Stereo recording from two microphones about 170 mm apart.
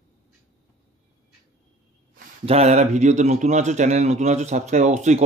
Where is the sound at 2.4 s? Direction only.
40° right (ahead or behind).